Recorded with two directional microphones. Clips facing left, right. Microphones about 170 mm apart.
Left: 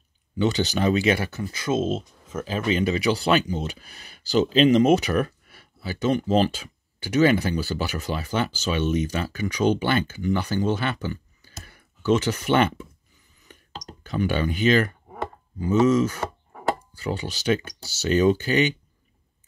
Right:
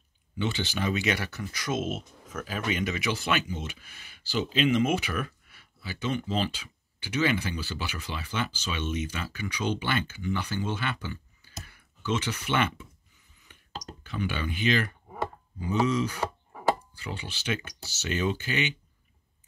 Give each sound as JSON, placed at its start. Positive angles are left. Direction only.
{"t": 0.4, "sound": "speech", "side_deg": 40}
{"t": 13.5, "sound": "a sound", "side_deg": 40}
{"t": 14.0, "sound": "speech", "side_deg": 40}